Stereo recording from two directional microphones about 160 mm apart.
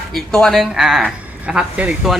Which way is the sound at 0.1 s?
5° left (ahead or behind).